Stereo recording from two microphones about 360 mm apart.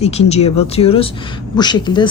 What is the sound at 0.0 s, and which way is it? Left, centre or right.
Speech, centre.